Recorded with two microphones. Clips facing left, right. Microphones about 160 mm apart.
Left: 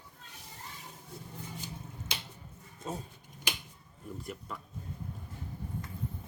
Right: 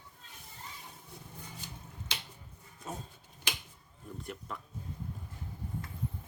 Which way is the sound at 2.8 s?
25° left (ahead or behind).